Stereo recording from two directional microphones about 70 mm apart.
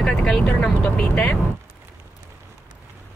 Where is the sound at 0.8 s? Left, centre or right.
Centre.